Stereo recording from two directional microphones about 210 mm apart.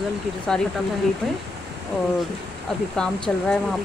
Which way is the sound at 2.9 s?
5° left (ahead or behind).